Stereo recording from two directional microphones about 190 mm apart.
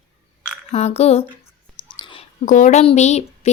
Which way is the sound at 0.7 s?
35° left (ahead or behind).